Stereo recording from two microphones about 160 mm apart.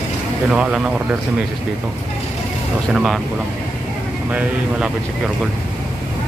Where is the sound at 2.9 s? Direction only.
5° right (ahead or behind).